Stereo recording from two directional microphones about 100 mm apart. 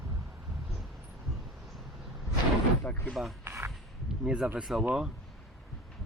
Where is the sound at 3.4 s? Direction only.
25° right (ahead or behind).